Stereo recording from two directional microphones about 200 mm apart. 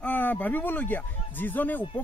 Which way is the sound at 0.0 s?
10° left (ahead or behind).